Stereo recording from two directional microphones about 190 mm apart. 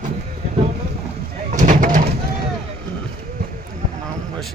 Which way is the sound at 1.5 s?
40° right (ahead or behind).